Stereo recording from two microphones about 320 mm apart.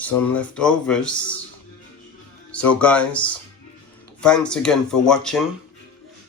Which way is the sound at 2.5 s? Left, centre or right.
Centre.